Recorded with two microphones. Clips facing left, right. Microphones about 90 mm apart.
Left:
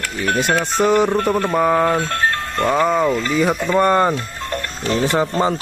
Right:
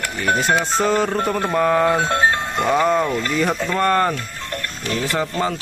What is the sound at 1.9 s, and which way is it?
Music, 20° right (ahead or behind).